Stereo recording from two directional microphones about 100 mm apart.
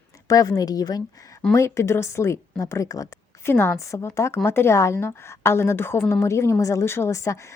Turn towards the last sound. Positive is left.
turn(degrees=30)  # may be behind; listen again after turning